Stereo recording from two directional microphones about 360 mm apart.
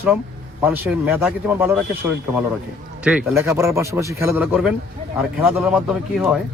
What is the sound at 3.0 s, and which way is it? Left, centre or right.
A man's voice, centre.